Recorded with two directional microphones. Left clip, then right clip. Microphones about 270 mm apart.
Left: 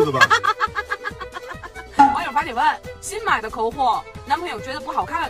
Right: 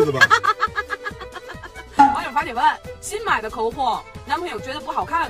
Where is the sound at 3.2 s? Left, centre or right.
Centre.